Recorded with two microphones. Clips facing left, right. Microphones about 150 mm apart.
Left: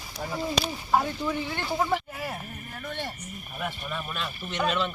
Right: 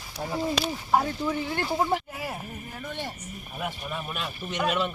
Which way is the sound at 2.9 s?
10° right (ahead or behind).